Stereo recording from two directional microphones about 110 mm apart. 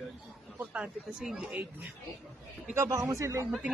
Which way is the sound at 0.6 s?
10° right (ahead or behind).